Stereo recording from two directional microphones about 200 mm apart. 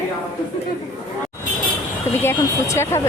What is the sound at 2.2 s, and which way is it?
Speech, 15° left (ahead or behind).